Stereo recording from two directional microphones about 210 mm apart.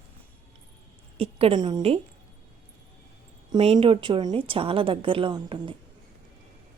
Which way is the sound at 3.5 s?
25° right (ahead or behind).